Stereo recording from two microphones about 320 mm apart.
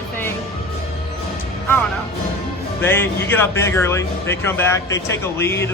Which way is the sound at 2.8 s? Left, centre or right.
Centre.